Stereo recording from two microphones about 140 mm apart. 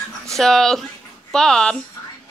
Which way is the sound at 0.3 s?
5° left (ahead or behind).